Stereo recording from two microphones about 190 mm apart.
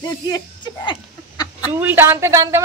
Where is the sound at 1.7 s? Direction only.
10° right (ahead or behind).